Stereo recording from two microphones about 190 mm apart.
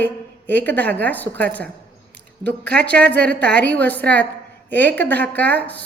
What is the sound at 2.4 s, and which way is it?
Speech, 60° right (ahead or behind).